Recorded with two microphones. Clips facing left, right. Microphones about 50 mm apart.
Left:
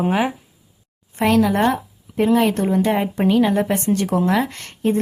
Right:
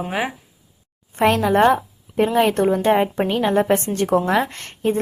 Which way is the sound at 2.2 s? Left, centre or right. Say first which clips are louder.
Even; right.